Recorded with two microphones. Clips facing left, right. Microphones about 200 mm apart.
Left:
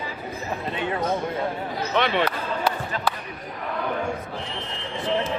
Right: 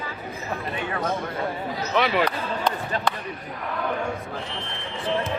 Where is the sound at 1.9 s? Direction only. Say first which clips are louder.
Right 1 dB; 5° right (ahead or behind).